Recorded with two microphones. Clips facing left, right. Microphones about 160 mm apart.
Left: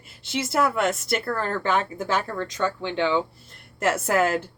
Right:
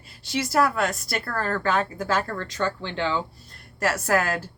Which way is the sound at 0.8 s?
25° left (ahead or behind).